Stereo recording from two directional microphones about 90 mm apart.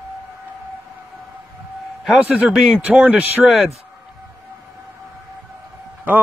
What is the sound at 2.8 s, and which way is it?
Speech, 15° right (ahead or behind).